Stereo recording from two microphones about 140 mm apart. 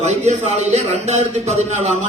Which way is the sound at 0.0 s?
50° right (ahead or behind).